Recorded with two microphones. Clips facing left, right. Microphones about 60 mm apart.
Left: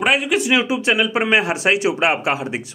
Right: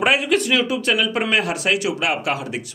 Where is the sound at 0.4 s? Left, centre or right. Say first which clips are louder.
Left 2 dB; centre.